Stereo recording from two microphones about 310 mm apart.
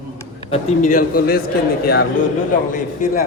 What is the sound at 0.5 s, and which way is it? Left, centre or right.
Speech, left.